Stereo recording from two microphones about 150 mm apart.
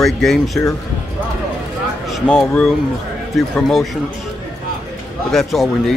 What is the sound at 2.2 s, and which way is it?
Speech, 5° left (ahead or behind).